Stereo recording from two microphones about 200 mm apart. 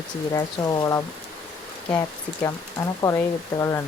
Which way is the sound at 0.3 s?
20° left (ahead or behind).